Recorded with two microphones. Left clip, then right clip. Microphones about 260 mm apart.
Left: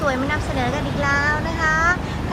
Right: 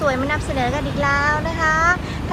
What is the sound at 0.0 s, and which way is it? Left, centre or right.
Speech, centre.